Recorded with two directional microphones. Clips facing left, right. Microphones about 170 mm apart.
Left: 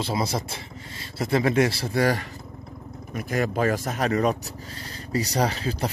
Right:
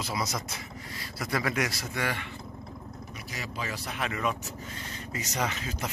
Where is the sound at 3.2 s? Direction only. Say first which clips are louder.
Left 15 dB; 55° left (ahead or behind).